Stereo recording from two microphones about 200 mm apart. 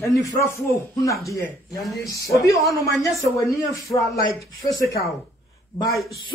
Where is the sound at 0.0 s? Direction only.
15° left (ahead or behind).